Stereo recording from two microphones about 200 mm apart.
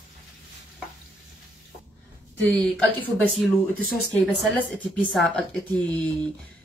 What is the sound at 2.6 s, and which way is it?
Speech, 5° left (ahead or behind).